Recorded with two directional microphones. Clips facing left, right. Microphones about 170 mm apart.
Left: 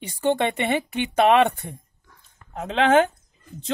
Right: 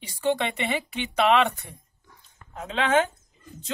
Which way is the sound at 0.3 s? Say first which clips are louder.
Left 4 dB; 50° left (ahead or behind).